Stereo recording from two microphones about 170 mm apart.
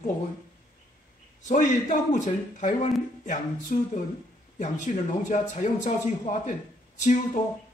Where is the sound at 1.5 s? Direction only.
50° left (ahead or behind).